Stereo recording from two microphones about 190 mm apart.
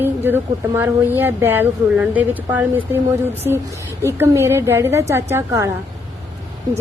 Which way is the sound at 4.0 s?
15° right (ahead or behind).